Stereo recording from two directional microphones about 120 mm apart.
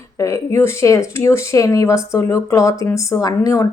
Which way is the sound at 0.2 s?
25° left (ahead or behind).